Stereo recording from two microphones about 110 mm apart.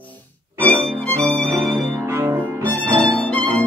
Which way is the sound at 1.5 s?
25° right (ahead or behind).